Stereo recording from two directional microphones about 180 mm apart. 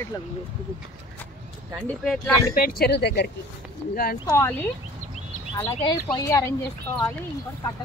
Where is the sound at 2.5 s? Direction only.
55° left (ahead or behind).